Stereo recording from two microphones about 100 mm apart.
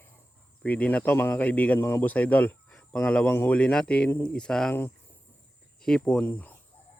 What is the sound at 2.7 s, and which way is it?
Cricket, 10° left (ahead or behind).